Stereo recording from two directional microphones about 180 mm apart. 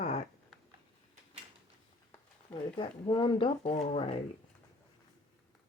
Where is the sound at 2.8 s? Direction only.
25° left (ahead or behind).